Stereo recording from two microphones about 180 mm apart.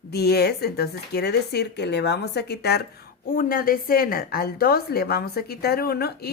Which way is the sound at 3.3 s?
50° left (ahead or behind).